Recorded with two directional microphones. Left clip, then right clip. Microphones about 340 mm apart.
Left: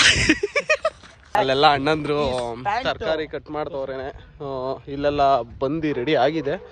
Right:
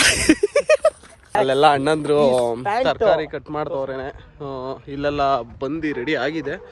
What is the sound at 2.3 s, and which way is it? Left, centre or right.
Speech, right.